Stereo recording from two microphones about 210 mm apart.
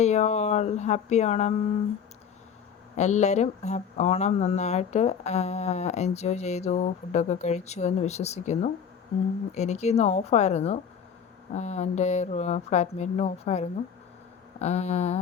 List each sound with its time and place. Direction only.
0.0 s speech: 30° left (ahead or behind)
2.9 s speech: 35° left (ahead or behind)